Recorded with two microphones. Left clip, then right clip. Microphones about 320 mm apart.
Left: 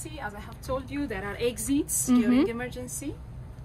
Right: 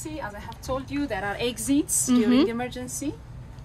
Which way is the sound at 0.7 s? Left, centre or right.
Centre.